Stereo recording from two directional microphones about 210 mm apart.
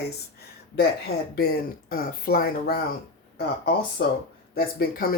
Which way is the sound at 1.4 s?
45° left (ahead or behind).